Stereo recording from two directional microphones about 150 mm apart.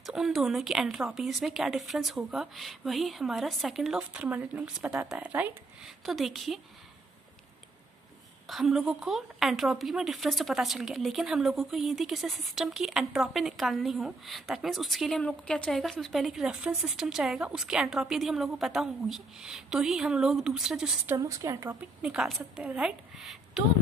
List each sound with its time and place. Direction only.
0.0 s a woman's voice: centre (ahead or behind)
8.5 s a woman's voice: centre (ahead or behind)
21.2 s speech: 20° right (ahead or behind)
22.0 s a woman's voice: 5° right (ahead or behind)